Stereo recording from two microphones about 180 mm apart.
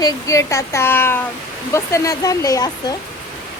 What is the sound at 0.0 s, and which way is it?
Speech, 20° left (ahead or behind).